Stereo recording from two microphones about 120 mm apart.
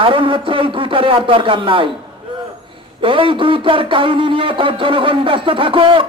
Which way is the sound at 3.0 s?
45° right (ahead or behind).